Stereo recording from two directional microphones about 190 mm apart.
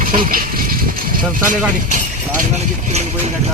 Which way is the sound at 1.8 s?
45° right (ahead or behind).